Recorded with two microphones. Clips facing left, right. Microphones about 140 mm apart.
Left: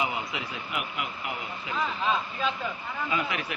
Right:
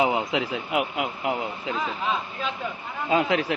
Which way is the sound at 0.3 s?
90° right.